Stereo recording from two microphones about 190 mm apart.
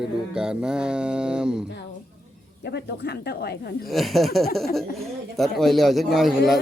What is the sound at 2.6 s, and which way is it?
Speech, 60° left (ahead or behind).